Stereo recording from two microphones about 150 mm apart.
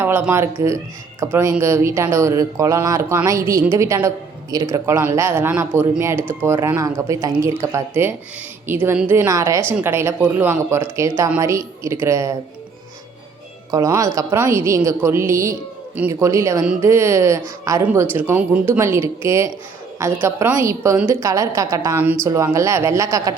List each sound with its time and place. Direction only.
0.0 s a woman's voice: 15° right (ahead or behind)
13.7 s a woman's voice: 25° right (ahead or behind)